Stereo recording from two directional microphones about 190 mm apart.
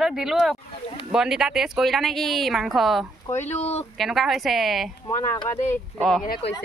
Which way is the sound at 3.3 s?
35° left (ahead or behind).